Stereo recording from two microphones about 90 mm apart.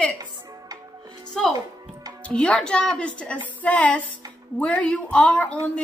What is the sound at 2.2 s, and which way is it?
A woman's voice, 15° left (ahead or behind).